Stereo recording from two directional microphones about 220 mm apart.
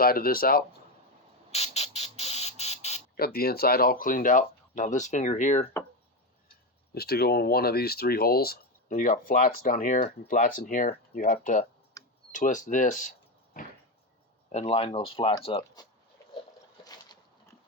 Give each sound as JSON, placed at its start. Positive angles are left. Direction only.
{"t": 0.0, "sound": "speech", "side_deg": 40}
{"t": 1.5, "sound": "chicken", "side_deg": 30}
{"t": 3.2, "sound": "speech", "side_deg": 45}
{"t": 6.9, "sound": "speech", "side_deg": 45}
{"t": 14.5, "sound": "speech", "side_deg": 25}
{"t": 16.8, "sound": "boat", "side_deg": 20}